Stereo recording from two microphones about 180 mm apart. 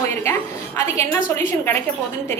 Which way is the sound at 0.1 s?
15° left (ahead or behind).